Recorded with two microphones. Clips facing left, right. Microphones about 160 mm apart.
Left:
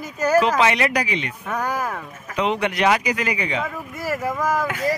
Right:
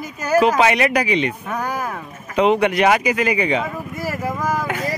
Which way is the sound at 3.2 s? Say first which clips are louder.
Right 5 dB; 15° right (ahead or behind).